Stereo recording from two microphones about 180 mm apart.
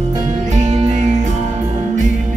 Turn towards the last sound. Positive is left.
turn(degrees=-40)  # may be behind; listen again after turning